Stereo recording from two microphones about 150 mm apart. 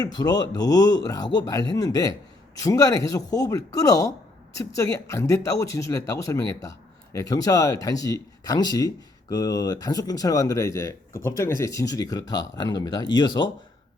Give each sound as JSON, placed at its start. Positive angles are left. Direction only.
{"t": 0.0, "sound": "speech", "side_deg": 25}